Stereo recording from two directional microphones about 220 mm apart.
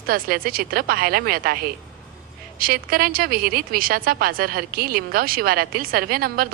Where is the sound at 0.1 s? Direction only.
40° right (ahead or behind).